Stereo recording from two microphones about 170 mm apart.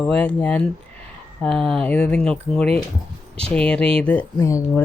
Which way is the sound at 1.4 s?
Centre (ahead or behind).